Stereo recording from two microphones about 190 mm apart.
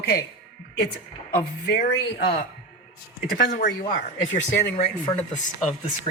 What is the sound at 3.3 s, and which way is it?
Speech, 50° left (ahead or behind).